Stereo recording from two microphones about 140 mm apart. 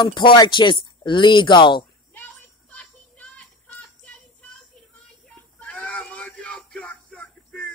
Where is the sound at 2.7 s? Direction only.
10° left (ahead or behind).